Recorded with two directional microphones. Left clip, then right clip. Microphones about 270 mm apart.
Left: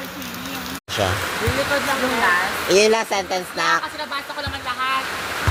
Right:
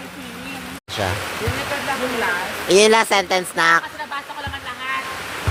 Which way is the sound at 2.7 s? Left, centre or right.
Right.